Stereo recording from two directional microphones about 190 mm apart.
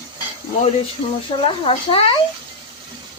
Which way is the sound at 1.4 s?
30° left (ahead or behind).